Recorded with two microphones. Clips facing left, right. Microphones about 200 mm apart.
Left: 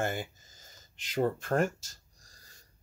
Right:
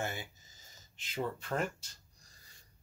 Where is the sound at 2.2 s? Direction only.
45° left (ahead or behind).